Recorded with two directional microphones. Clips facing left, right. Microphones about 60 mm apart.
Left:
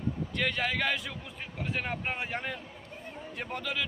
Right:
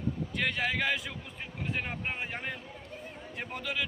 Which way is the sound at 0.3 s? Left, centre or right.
Centre.